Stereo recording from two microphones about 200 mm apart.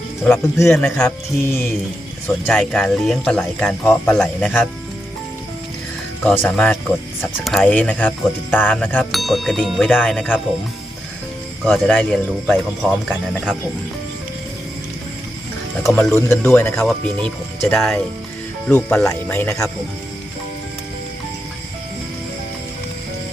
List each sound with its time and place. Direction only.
0.4 s speech: 15° left (ahead or behind)
6.4 s speech: 5° left (ahead or behind)
11.6 s speech: 5° left (ahead or behind)
15.8 s speech: centre (ahead or behind)
16.1 s speech: 10° left (ahead or behind)